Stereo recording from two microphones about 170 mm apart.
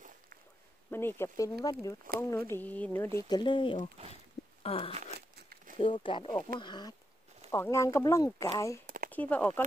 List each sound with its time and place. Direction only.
0.8 s speech: 15° left (ahead or behind)
8.8 s a sound: 55° right (ahead or behind)
9.1 s speech: 10° left (ahead or behind)